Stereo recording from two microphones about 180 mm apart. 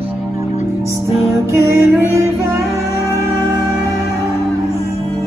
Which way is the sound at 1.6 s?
15° right (ahead or behind).